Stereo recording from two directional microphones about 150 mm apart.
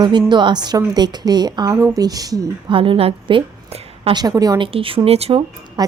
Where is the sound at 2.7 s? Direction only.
35° right (ahead or behind).